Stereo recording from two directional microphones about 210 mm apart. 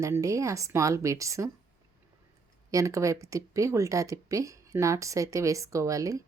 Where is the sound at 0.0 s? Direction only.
15° right (ahead or behind).